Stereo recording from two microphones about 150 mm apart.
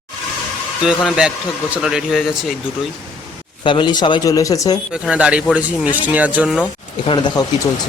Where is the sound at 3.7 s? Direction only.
30° left (ahead or behind).